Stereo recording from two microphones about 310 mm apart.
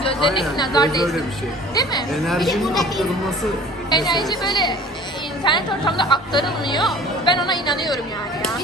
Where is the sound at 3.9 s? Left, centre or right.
Centre.